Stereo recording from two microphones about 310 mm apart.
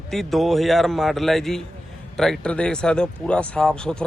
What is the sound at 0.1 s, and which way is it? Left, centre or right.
Speech, centre.